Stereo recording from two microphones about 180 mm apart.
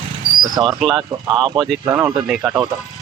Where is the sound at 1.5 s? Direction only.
Centre (ahead or behind).